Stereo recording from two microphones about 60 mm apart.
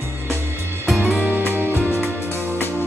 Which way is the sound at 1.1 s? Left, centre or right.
Right.